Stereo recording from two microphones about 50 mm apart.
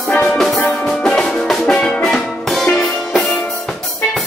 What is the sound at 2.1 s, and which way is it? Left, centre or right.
Music, centre.